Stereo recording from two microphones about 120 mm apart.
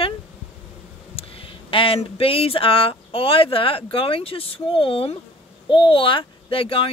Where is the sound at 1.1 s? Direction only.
50° left (ahead or behind).